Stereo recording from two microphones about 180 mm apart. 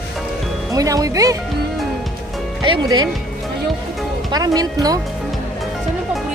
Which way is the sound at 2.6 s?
25° right (ahead or behind).